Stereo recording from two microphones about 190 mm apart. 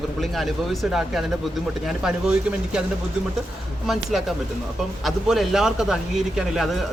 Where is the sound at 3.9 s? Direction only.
Centre (ahead or behind).